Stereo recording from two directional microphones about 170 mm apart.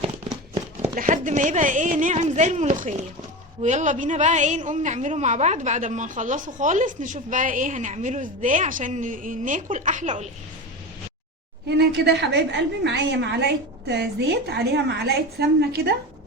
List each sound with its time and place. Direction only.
0.9 s a woman's voice: 50° right (ahead or behind)
11.8 s a woman's voice: 80° right